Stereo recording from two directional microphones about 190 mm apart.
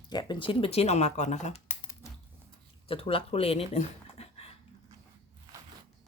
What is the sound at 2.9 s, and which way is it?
Speech, 30° left (ahead or behind).